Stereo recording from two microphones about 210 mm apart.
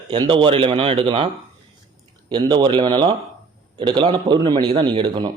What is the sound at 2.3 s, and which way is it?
A man's voice, 20° right (ahead or behind).